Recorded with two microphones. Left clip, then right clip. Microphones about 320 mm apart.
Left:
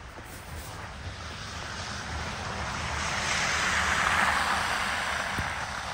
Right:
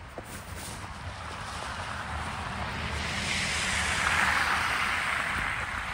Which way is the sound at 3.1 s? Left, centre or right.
Left.